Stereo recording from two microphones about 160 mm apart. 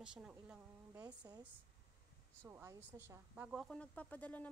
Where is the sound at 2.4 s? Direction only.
15° right (ahead or behind).